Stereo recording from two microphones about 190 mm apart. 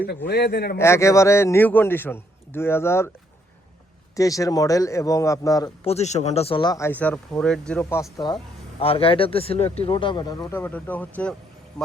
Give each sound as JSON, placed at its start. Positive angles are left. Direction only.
{"t": 0.3, "sound": "speech", "side_deg": 60}
{"t": 0.8, "sound": "a man's voice", "side_deg": 15}
{"t": 4.1, "sound": "a man's voice", "side_deg": 15}
{"t": 5.8, "sound": "speech", "side_deg": 35}
{"t": 8.8, "sound": "speech", "side_deg": 30}
{"t": 10.5, "sound": "a man's voice", "side_deg": 10}